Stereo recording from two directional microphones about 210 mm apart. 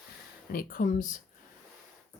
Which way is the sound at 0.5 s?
40° left (ahead or behind).